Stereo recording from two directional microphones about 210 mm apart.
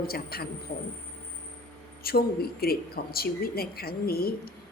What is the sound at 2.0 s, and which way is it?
Speech, 45° left (ahead or behind).